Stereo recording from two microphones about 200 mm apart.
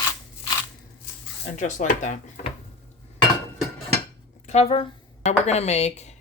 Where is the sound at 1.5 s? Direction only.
35° left (ahead or behind).